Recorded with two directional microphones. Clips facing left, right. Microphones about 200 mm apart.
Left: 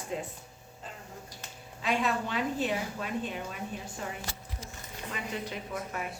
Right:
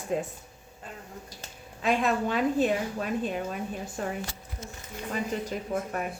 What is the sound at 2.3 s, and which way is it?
A woman's voice, 50° right (ahead or behind).